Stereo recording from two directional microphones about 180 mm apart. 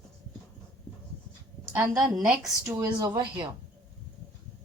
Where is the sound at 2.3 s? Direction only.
5° right (ahead or behind).